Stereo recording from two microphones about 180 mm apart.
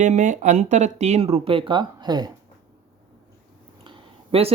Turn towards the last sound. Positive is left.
turn(degrees=-30)  # may be behind; listen again after turning